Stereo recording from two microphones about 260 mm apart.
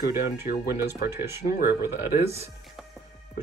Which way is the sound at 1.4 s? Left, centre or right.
Left.